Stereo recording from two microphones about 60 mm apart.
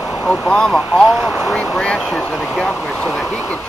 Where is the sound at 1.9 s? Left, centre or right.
Centre.